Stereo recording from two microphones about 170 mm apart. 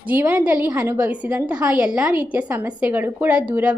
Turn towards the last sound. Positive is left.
turn(degrees=-10)  # may be behind; listen again after turning